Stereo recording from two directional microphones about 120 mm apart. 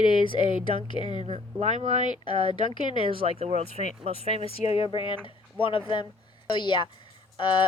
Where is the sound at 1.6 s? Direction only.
75° right (ahead or behind).